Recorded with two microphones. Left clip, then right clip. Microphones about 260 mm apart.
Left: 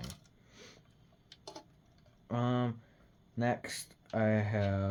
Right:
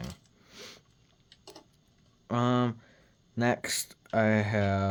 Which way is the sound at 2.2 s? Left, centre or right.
Right.